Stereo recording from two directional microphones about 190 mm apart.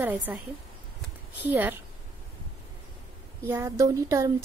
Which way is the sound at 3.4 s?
15° right (ahead or behind).